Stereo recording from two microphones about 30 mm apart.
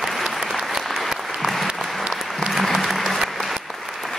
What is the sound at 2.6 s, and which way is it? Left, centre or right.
Applause, centre.